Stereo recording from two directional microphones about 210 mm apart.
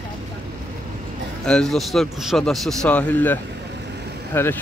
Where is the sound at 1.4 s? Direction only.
5° left (ahead or behind).